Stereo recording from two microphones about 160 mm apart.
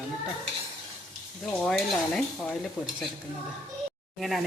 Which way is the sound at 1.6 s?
5° left (ahead or behind).